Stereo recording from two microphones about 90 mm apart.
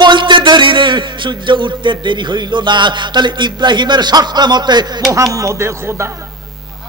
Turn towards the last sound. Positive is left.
turn(degrees=-30)  # may be behind; listen again after turning